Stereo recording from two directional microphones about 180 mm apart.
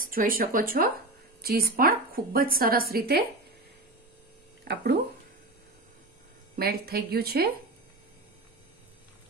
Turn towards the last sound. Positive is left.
turn(degrees=-60)  # may be behind; listen again after turning